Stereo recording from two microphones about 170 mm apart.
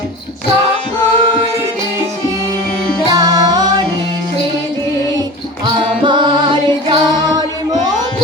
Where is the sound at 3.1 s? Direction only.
20° right (ahead or behind).